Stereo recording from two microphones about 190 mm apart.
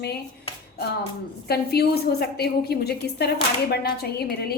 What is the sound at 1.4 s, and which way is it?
A woman's voice, 55° left (ahead or behind).